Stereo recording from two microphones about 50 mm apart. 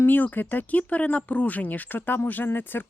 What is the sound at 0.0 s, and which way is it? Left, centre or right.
Speech, left.